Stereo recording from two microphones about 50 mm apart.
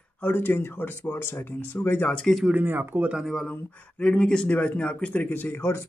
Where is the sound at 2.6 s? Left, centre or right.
Right.